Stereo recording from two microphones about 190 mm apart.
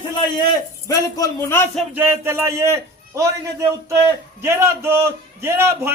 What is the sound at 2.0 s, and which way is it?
A man's voice, 10° right (ahead or behind).